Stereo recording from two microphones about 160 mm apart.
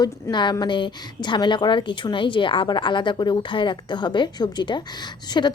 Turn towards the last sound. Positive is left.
turn(degrees=25)  # may be behind; listen again after turning